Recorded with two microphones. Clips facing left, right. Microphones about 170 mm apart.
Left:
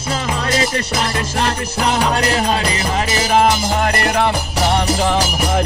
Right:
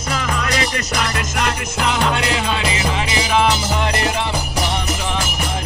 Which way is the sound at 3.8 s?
55° left (ahead or behind).